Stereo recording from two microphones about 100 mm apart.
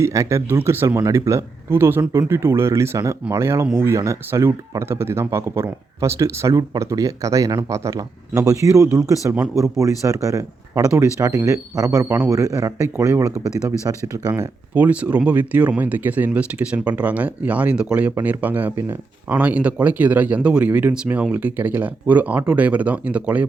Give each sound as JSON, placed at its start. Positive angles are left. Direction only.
{"t": 0.0, "sound": "speech", "side_deg": -30}
{"t": 14.8, "sound": "speech", "side_deg": -15}